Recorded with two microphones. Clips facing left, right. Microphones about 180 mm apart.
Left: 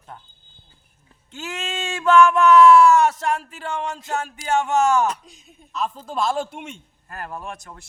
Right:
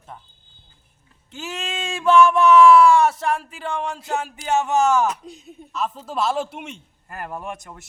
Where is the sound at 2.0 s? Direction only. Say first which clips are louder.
Even; 10° right (ahead or behind).